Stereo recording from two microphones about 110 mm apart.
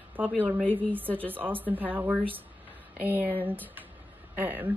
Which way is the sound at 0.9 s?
15° right (ahead or behind).